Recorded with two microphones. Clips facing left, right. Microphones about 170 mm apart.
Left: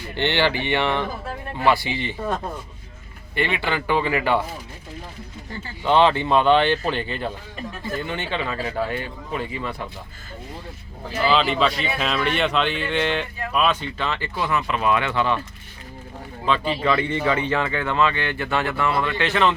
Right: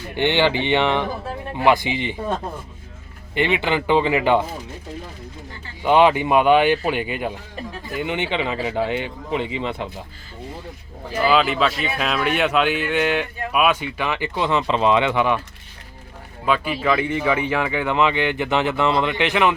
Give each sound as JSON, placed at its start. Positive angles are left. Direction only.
{"t": 0.2, "sound": "speech", "side_deg": -15}
{"t": 3.3, "sound": "speech", "side_deg": -20}
{"t": 5.8, "sound": "speech", "side_deg": -15}
{"t": 11.3, "sound": "speech", "side_deg": -5}
{"t": 16.5, "sound": "speech", "side_deg": -5}